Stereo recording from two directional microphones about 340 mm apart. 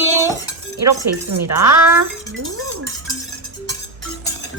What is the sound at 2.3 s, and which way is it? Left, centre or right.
Music, right.